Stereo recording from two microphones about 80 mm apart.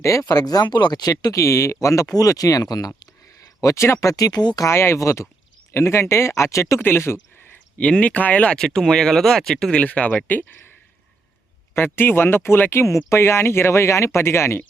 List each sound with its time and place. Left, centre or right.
0.0 s speech: left
0.3 s speech: left
4.2 s speech: left
4.6 s speech: left
6.7 s speech: left
7.8 s speech: centre
9.8 s speech: centre
11.7 s speech: left
12.8 s speech: left